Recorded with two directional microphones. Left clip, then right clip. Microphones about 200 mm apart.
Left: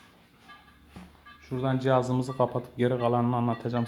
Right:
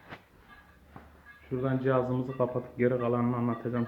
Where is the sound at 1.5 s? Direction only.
50° left (ahead or behind).